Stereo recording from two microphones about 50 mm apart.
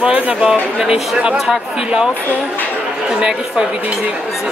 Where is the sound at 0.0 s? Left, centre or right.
Right.